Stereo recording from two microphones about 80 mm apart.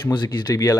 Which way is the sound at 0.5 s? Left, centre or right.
Left.